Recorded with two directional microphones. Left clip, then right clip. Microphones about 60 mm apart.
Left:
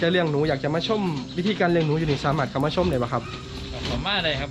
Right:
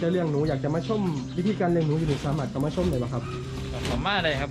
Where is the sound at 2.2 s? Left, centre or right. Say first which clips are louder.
Left 7 dB; centre.